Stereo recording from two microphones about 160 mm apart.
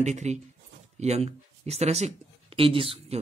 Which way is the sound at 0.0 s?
45° right (ahead or behind).